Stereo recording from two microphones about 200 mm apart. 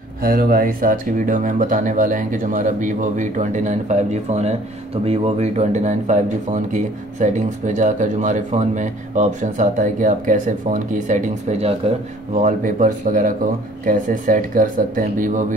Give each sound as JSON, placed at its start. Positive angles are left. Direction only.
{"t": 0.2, "sound": "speech", "side_deg": -45}